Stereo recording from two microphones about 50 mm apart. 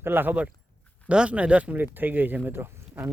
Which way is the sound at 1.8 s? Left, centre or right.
Right.